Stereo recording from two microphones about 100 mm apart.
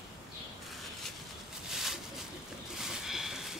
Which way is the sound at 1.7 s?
5° right (ahead or behind).